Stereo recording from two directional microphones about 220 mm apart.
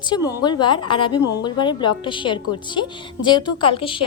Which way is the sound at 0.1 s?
20° left (ahead or behind).